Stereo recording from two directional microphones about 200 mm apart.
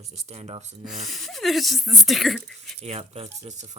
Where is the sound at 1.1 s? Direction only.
Centre (ahead or behind).